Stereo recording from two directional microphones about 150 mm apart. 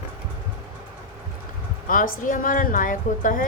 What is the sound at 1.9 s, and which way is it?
A woman's voice, 65° left (ahead or behind).